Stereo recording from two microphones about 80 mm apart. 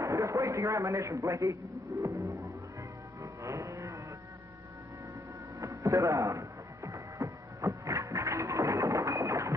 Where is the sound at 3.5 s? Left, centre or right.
Right.